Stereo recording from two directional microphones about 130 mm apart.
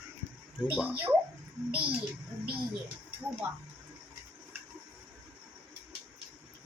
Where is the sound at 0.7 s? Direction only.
15° right (ahead or behind).